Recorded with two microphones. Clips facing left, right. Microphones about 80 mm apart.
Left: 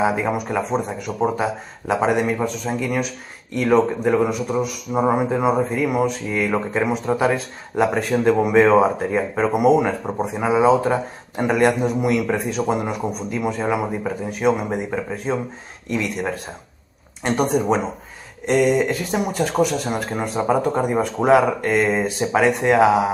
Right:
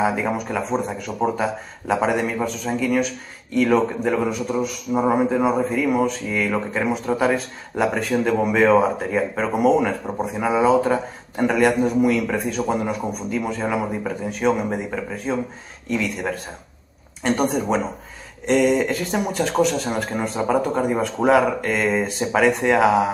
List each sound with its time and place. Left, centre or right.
0.0 s speech: centre
18.5 s speech: centre